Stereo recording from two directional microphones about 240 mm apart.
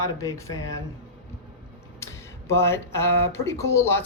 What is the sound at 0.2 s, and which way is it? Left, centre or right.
Speech, centre.